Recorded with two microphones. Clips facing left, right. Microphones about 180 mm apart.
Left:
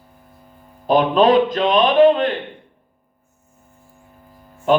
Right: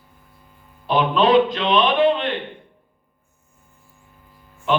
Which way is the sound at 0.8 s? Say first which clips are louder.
Left 4 dB; 45° left (ahead or behind).